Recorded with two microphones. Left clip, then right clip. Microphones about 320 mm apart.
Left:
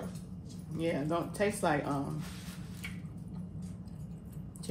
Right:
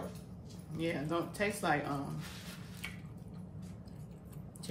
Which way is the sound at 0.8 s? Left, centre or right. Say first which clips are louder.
Left 3 dB; centre.